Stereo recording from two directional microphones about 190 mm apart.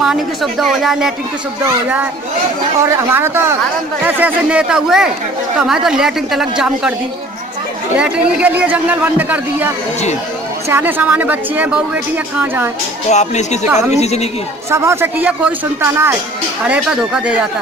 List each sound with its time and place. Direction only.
0.0 s a woman's voice: centre (ahead or behind)
2.8 s a woman's voice: 15° right (ahead or behind)
7.9 s speech: 5° right (ahead or behind)
13.1 s speech: 35° left (ahead or behind)
14.7 s a woman's voice: 15° right (ahead or behind)